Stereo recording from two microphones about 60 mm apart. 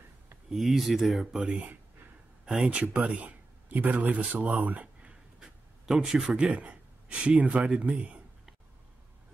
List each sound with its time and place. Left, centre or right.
0.5 s speech: centre
1.2 s speech: centre
5.4 s speech: centre